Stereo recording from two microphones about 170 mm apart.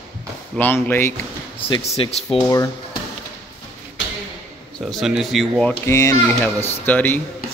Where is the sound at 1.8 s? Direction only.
40° left (ahead or behind).